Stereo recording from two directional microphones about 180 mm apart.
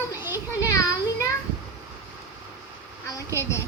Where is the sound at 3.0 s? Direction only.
15° left (ahead or behind).